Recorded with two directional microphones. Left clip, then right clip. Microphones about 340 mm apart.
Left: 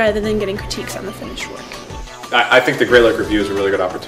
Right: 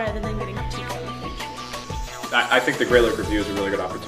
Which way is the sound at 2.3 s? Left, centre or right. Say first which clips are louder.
Left 7 dB; centre.